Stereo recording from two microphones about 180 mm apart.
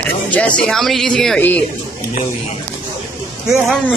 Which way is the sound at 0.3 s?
5° left (ahead or behind).